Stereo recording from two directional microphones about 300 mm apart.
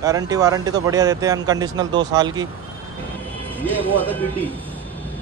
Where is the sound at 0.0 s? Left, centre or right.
Centre.